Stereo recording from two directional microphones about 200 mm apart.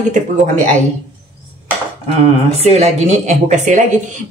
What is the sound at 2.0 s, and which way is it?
Speech, 30° right (ahead or behind).